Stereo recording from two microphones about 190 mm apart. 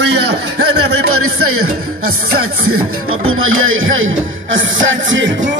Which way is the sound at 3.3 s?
90° right.